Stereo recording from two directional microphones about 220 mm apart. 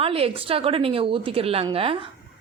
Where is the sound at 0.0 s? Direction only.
25° right (ahead or behind).